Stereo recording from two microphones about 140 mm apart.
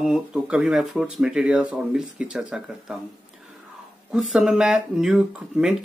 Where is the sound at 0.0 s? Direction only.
5° right (ahead or behind).